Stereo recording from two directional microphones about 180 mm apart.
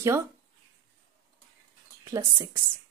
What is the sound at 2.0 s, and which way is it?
Speech, 15° right (ahead or behind).